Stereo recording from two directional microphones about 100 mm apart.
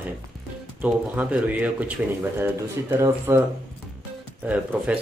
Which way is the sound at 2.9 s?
25° right (ahead or behind).